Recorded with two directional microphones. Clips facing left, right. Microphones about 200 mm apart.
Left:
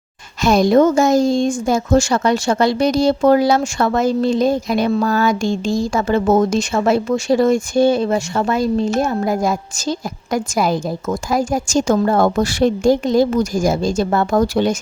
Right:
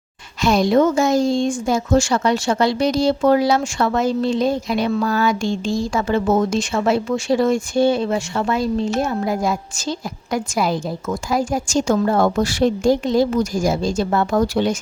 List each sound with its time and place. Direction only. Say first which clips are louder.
0.4 s speech: left 3 dB; 45° left (ahead or behind)